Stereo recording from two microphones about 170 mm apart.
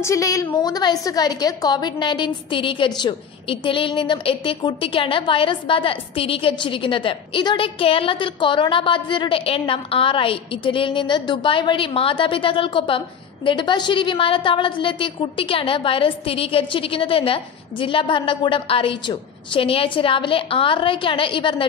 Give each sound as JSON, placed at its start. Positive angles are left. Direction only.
{"t": 0.0, "sound": "a woman's voice", "side_deg": 20}